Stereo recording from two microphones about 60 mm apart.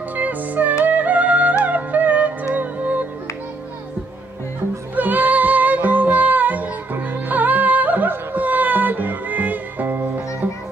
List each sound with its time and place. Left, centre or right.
0.1 s music: right
4.9 s music: right